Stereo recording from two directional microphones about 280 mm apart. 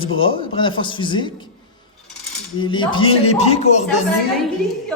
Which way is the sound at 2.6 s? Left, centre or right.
Centre.